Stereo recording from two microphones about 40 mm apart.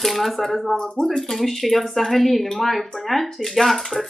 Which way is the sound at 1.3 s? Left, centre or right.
Centre.